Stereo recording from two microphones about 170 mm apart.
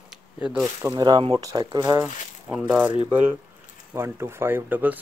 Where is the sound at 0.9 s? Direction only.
25° right (ahead or behind).